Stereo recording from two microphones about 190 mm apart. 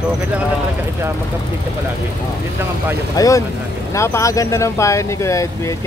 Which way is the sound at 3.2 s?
15° left (ahead or behind).